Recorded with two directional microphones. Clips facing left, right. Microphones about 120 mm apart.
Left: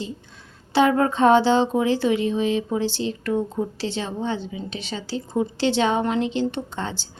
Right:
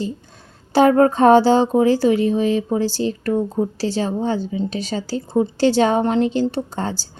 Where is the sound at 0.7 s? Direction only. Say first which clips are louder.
Right 5 dB; 40° right (ahead or behind).